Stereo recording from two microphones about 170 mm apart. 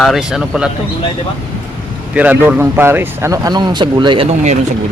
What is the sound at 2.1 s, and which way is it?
Speech, 10° right (ahead or behind).